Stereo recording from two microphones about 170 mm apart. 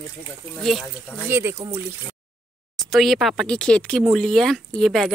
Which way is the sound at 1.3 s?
15° right (ahead or behind).